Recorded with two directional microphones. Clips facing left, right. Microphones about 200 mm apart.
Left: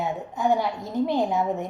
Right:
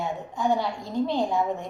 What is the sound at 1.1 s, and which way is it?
Speech, 20° left (ahead or behind).